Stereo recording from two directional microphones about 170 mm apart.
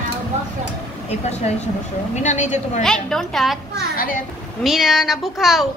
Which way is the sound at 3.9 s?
55° left (ahead or behind).